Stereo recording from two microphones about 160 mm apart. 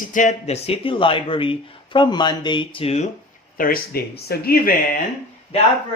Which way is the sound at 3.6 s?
65° left (ahead or behind).